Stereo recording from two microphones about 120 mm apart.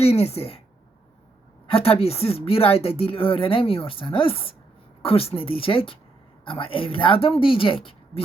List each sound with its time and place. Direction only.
0.0 s a woman's voice: 60° left (ahead or behind)
1.6 s a woman's voice: 50° left (ahead or behind)